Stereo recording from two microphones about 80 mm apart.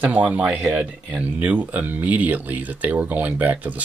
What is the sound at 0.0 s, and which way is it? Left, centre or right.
Speech, centre.